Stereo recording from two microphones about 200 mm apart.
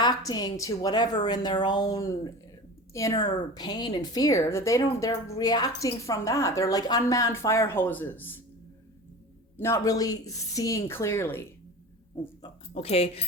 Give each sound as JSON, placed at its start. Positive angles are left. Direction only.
{"t": 0.0, "sound": "a woman's voice", "side_deg": 20}
{"t": 9.6, "sound": "a woman's voice", "side_deg": 15}
{"t": 12.1, "sound": "speech", "side_deg": 25}